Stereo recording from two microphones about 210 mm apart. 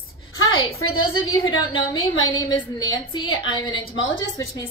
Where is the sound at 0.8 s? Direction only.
80° left.